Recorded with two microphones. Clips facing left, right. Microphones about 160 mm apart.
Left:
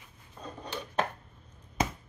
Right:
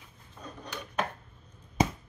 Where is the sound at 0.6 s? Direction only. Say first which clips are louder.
Left 3 dB; 30° left (ahead or behind).